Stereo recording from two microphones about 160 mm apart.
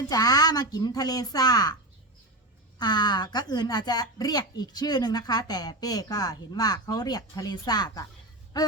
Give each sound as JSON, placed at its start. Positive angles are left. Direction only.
{"t": 0.1, "sound": "a woman's voice", "side_deg": 25}
{"t": 2.7, "sound": "a woman's voice", "side_deg": 25}